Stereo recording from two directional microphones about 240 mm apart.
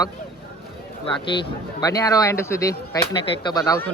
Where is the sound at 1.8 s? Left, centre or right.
Centre.